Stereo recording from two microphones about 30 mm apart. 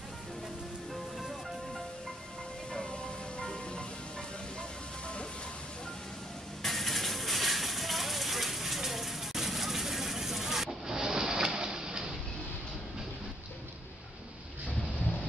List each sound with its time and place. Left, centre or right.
2.8 s music: left
6.6 s a sound: centre
11.0 s printer: right